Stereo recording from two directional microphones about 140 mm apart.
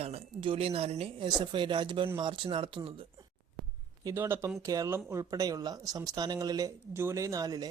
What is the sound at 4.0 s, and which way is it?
Speech, 20° right (ahead or behind).